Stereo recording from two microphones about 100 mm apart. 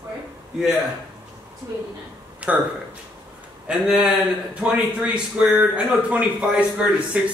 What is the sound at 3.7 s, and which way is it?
Speech, 5° right (ahead or behind).